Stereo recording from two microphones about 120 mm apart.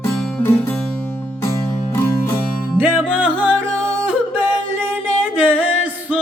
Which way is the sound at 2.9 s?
Centre (ahead or behind).